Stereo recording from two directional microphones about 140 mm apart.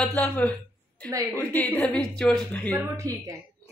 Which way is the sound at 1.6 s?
10° left (ahead or behind).